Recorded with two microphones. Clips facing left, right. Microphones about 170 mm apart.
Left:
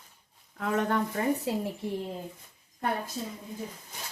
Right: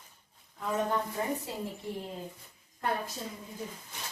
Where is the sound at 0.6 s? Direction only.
75° left (ahead or behind).